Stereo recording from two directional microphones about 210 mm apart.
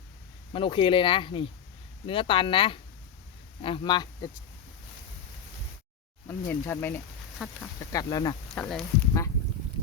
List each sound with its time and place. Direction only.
0.5 s speech: 25° left (ahead or behind)
6.2 s speech: 10° left (ahead or behind)
7.3 s speech: centre (ahead or behind)
7.9 s speech: 20° left (ahead or behind)
8.5 s speech: 5° left (ahead or behind)